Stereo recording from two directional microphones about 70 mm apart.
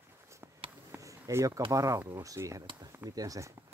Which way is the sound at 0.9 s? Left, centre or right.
Right.